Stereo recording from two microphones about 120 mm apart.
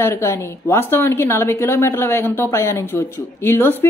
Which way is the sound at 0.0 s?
20° left (ahead or behind).